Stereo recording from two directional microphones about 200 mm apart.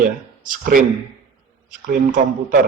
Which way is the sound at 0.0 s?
45° right (ahead or behind).